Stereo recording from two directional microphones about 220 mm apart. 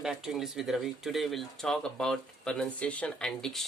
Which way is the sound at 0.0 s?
Centre (ahead or behind).